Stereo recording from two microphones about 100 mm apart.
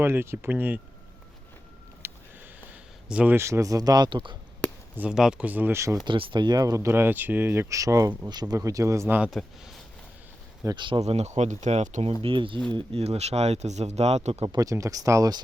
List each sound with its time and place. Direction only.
0.0 s speech: 25° right (ahead or behind)
2.0 s a sound: 25° right (ahead or behind)
3.1 s speech: 10° right (ahead or behind)
3.3 s speech: 30° right (ahead or behind); by 4.4 s 50° right (ahead or behind)
4.9 s speech: 10° right (ahead or behind)
6.1 s speech: 55° right (ahead or behind); by 9.1 s 30° right (ahead or behind)
9.3 s speech: centre (ahead or behind)
10.8 s speech: 55° right (ahead or behind)
11.0 s speech: 90° right
12.2 s speech: 60° right (ahead or behind)
12.7 s speech: 85° right
14.5 s speech: 35° right (ahead or behind)